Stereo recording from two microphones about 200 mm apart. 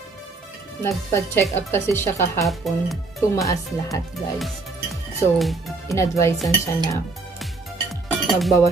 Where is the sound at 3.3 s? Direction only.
15° left (ahead or behind).